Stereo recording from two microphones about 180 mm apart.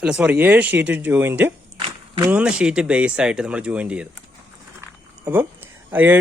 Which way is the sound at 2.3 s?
5° right (ahead or behind).